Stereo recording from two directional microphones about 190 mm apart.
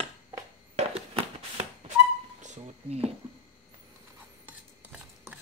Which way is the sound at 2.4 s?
35° right (ahead or behind).